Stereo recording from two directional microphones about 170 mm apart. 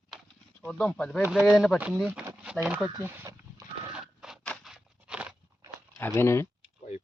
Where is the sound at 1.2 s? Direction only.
5° right (ahead or behind).